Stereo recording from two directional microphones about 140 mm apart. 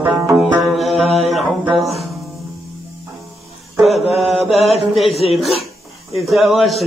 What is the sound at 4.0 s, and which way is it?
Mantra, 45° left (ahead or behind).